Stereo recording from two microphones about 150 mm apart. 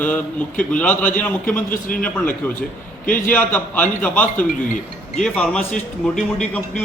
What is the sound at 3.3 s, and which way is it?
Speech, 10° left (ahead or behind).